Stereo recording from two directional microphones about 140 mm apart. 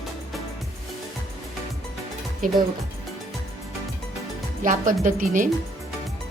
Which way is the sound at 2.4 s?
80° right.